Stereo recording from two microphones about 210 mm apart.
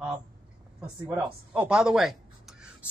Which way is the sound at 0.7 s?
5° right (ahead or behind).